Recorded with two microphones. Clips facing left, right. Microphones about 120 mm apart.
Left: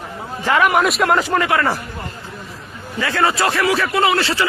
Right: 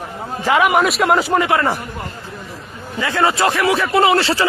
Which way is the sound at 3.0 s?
20° right (ahead or behind).